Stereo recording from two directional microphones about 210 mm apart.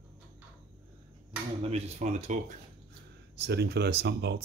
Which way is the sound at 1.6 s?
30° right (ahead or behind).